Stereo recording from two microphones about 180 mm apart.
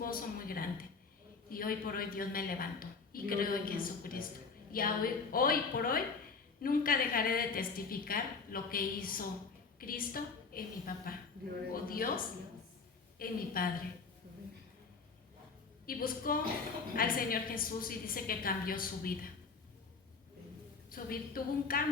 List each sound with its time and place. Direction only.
0.0 s speech: 55° left (ahead or behind)
15.9 s speech: 55° left (ahead or behind)
20.9 s speech: 55° left (ahead or behind)